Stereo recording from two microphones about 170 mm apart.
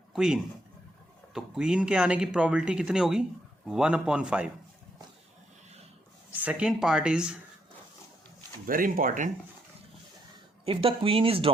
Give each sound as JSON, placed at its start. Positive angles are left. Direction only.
{"t": 0.1, "sound": "speech", "side_deg": -5}
{"t": 6.4, "sound": "speech", "side_deg": -5}
{"t": 8.6, "sound": "speech", "side_deg": -55}
{"t": 10.7, "sound": "speech", "side_deg": -30}